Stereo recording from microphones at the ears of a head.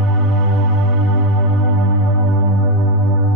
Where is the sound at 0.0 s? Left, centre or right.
Right.